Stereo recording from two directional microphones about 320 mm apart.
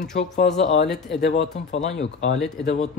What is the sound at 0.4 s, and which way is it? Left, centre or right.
Speech, left.